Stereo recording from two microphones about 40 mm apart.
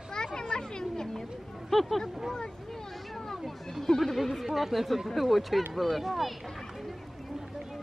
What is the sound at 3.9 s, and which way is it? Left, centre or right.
Speech, centre.